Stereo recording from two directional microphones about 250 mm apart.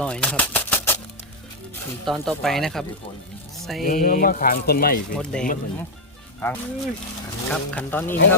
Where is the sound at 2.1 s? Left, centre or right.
Centre.